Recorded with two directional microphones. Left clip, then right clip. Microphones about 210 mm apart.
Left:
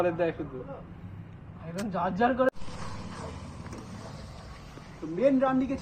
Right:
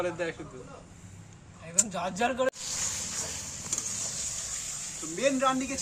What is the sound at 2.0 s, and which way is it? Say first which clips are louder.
Speech: left 5 dB; 20° right (ahead or behind).